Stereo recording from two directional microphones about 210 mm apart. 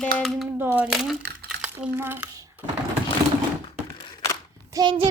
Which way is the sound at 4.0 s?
20° left (ahead or behind).